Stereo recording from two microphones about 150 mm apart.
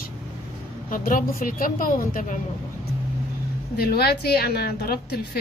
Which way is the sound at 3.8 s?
90° left.